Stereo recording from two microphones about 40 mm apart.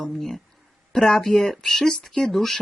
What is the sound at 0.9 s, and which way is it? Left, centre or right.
Speech, centre.